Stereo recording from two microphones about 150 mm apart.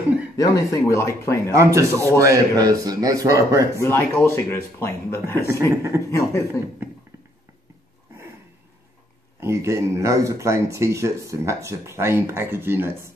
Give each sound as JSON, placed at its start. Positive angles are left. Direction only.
{"t": 0.4, "sound": "speech", "side_deg": 25}
{"t": 1.5, "sound": "speech", "side_deg": -20}
{"t": 3.7, "sound": "speech", "side_deg": 15}
{"t": 9.4, "sound": "speech", "side_deg": -20}